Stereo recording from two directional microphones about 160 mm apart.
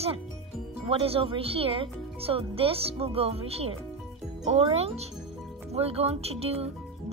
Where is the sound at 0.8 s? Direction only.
40° right (ahead or behind).